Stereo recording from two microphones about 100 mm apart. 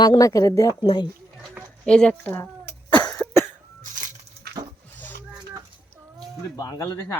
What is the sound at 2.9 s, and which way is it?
Cough, 10° left (ahead or behind).